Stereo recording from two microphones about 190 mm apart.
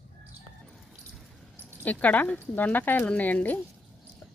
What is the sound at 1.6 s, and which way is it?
Speech, 10° left (ahead or behind).